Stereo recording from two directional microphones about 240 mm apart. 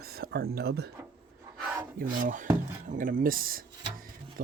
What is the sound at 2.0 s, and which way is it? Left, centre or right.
Speech, right.